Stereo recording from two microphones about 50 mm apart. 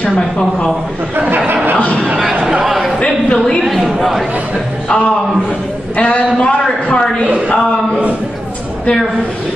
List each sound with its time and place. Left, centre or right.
2.6 s a sound: centre
3.0 s a man's voice: centre
4.8 s a man's voice: left